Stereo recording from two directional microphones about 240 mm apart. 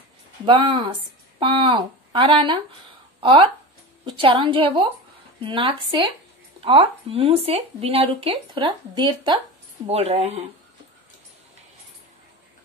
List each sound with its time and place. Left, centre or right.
0.5 s speech: right